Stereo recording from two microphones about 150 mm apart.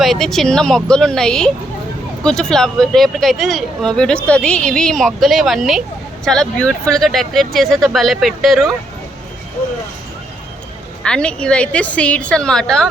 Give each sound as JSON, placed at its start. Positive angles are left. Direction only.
{"t": 0.0, "sound": "speech", "side_deg": 0}
{"t": 11.0, "sound": "a woman's voice", "side_deg": 5}